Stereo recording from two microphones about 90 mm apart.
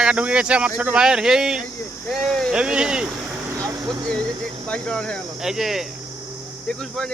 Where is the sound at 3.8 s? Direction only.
50° right (ahead or behind).